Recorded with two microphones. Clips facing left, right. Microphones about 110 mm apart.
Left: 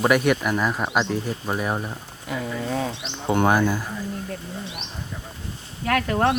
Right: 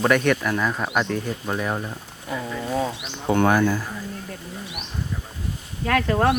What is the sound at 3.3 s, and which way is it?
Speech, 20° left (ahead or behind).